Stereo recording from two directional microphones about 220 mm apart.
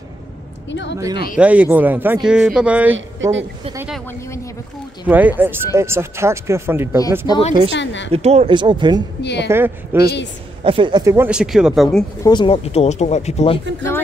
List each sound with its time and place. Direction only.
0.7 s a woman's voice: 55° left (ahead or behind)
0.9 s speech: 15° right (ahead or behind)
3.2 s a woman's voice: 60° right (ahead or behind)
3.7 s speech: 5° right (ahead or behind)
5.0 s speech: 10° right (ahead or behind)
7.2 s speech: 25° left (ahead or behind)
7.7 s a woman's voice: 55° left (ahead or behind)
8.1 s speech: 30° right (ahead or behind)
9.2 s speech: 50° left (ahead or behind)
9.9 s speech: 10° right (ahead or behind)
10.6 s speech: 25° right (ahead or behind); by 12.0 s centre (ahead or behind)
12.2 s speech: 20° left (ahead or behind)